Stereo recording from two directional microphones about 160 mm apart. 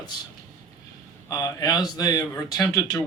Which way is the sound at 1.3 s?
20° left (ahead or behind).